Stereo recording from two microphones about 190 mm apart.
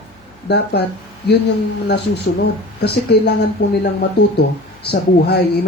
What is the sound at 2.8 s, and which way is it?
Speech, 60° left (ahead or behind).